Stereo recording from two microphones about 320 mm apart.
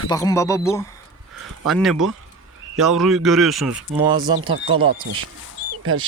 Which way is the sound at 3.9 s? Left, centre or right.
Centre.